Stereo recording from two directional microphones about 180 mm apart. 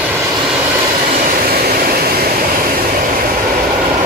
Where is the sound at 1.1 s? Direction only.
50° right (ahead or behind).